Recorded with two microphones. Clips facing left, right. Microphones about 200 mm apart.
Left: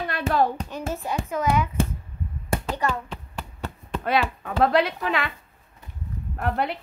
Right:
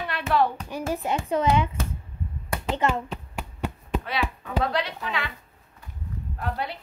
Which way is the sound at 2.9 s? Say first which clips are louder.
Right 2 dB; 10° right (ahead or behind).